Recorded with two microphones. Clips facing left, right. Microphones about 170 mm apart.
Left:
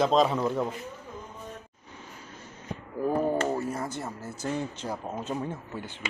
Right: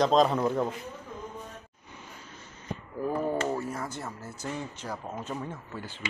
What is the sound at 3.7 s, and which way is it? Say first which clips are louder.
Speech: left 3 dB; 30° left (ahead or behind).